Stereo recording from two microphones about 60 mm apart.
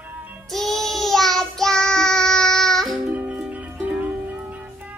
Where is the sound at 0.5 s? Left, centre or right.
Centre.